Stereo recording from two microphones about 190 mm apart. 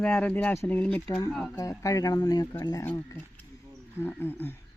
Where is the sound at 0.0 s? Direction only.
5° left (ahead or behind).